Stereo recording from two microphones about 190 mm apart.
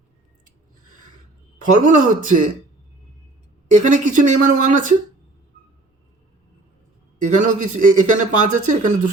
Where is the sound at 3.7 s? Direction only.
40° right (ahead or behind).